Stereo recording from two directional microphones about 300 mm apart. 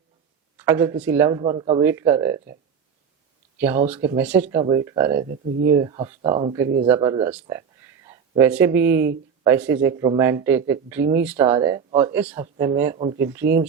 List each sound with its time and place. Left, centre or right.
0.5 s speech: centre
3.6 s speech: centre
5.3 s speech: right
5.7 s speech: centre